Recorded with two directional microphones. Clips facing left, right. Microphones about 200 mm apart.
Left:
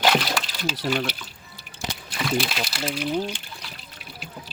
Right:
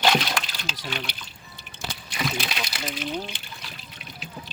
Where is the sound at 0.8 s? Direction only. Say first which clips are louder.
Left 9 dB; 50° left (ahead or behind).